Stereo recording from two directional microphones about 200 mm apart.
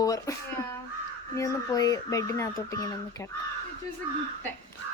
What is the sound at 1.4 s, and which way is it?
Speech, 15° left (ahead or behind).